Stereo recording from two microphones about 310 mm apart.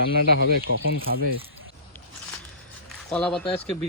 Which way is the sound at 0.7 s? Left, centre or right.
Left.